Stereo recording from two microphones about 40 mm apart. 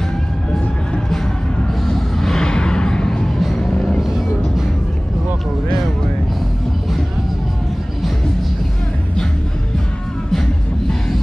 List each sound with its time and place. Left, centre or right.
1.9 s a sound: centre
3.3 s music: centre
3.7 s music: left
10.3 s music: centre